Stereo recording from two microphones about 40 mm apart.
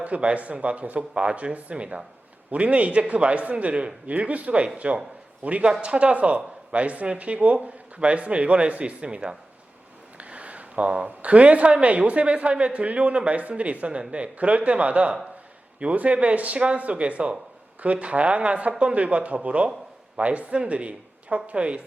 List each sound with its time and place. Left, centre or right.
0.0 s speech: right
4.1 s a man's voice: right